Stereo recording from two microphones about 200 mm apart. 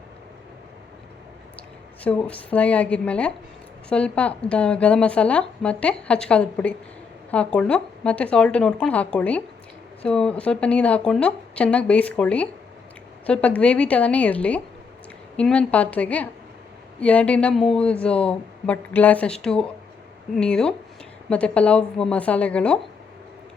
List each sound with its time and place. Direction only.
2.0 s a woman's voice: 5° left (ahead or behind)